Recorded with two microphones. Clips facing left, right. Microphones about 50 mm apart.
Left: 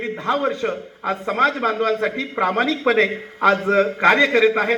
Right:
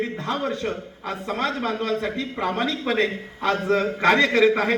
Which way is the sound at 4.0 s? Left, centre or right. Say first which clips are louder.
Left 1 dB; centre.